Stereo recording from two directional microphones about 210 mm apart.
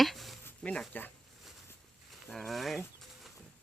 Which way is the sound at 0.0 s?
Centre (ahead or behind).